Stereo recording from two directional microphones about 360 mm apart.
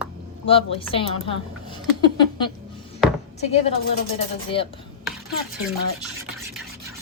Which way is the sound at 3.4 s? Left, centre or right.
Centre.